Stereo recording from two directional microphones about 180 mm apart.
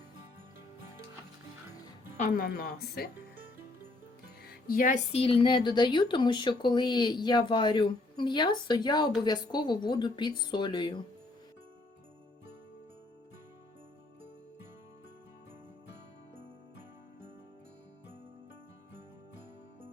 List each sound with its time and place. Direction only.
2.1 s speech: 50° left (ahead or behind)
4.4 s music: 55° left (ahead or behind)
5.1 s speech: 30° left (ahead or behind)